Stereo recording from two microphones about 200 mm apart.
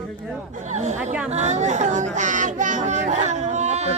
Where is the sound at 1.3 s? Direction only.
35° right (ahead or behind).